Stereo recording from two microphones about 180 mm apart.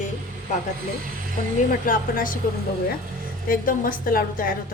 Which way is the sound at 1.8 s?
50° left (ahead or behind).